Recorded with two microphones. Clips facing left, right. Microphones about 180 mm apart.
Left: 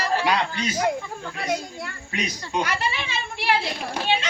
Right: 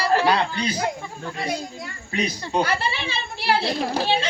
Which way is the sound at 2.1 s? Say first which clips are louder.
Right 4 dB; 35° right (ahead or behind).